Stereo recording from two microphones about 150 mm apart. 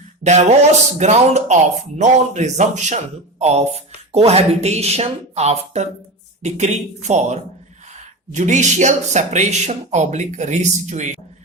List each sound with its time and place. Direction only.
0.2 s speech: 45° right (ahead or behind)
8.4 s speech: 55° right (ahead or behind)